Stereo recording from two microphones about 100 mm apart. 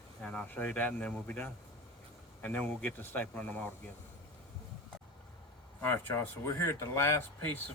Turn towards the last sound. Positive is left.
turn(degrees=25)  # may be behind; listen again after turning